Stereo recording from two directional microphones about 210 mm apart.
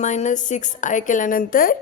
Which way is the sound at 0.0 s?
35° left (ahead or behind).